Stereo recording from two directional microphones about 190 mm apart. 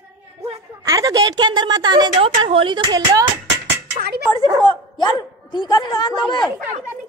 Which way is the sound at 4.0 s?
55° right (ahead or behind).